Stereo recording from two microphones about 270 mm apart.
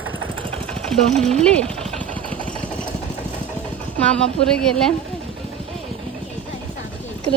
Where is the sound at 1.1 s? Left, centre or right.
Right.